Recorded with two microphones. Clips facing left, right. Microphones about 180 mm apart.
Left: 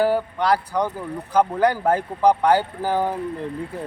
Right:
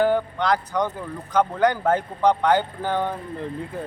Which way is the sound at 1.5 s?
35° left (ahead or behind).